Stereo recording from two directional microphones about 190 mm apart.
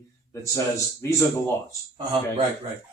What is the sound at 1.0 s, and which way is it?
Speech, 15° left (ahead or behind).